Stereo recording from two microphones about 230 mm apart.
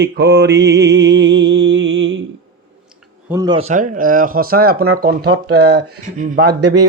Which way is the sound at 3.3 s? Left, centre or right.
Centre.